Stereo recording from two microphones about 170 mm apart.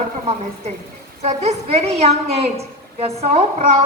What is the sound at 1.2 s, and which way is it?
A woman's voice, 40° right (ahead or behind).